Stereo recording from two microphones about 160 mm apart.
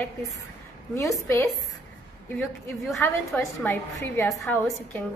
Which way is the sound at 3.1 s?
15° left (ahead or behind).